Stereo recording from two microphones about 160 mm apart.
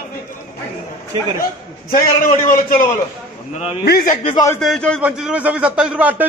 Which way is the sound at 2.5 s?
60° left (ahead or behind).